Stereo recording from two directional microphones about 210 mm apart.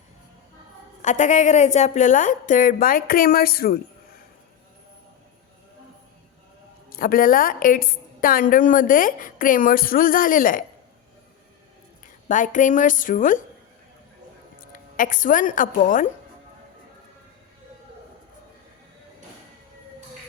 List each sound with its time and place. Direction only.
1.0 s a woman's voice: 35° left (ahead or behind)
6.9 s a woman's voice: 45° left (ahead or behind)
12.3 s a woman's voice: 35° left (ahead or behind)
14.9 s a woman's voice: 40° left (ahead or behind)